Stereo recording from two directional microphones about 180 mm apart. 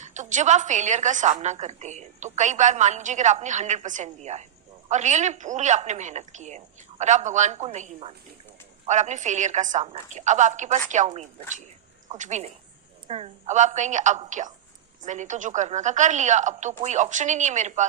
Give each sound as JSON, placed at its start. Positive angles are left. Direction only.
{"t": 0.0, "sound": "a woman's voice", "side_deg": -40}